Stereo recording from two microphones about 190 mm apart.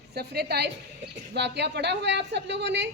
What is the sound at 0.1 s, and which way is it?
A woman's voice, 55° right (ahead or behind).